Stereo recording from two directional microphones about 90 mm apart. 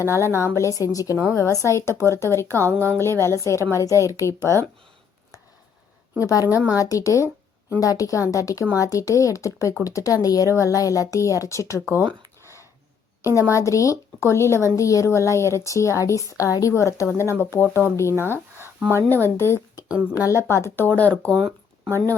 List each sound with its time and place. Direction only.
0.3 s a woman's voice: 35° left (ahead or behind)
6.1 s speech: 40° left (ahead or behind)
6.5 s a woman's voice: 15° right (ahead or behind)
6.7 s speech: 40° left (ahead or behind)
13.3 s a woman's voice: 35° left (ahead or behind)
18.1 s speech: 25° right (ahead or behind)
18.9 s a woman's voice: 25° left (ahead or behind)
19.9 s a woman's voice: 15° right (ahead or behind)
20.2 s a woman's voice: 30° left (ahead or behind); by 21.4 s 15° left (ahead or behind)
21.4 s a sound: 30° right (ahead or behind)